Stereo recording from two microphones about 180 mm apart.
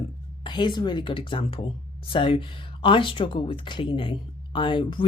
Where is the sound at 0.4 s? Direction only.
25° left (ahead or behind).